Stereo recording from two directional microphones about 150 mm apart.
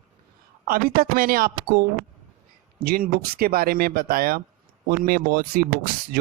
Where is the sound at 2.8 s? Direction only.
80° right.